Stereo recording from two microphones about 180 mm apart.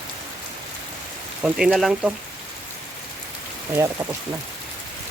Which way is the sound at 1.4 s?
5° right (ahead or behind).